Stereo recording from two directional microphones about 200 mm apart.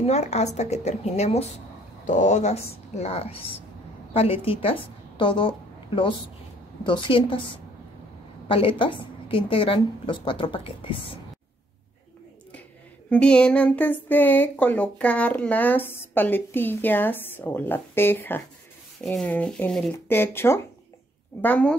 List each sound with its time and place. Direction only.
0.0 s a woman's voice: 35° left (ahead or behind)
8.5 s a woman's voice: 25° left (ahead or behind)
13.1 s speech: 5° left (ahead or behind)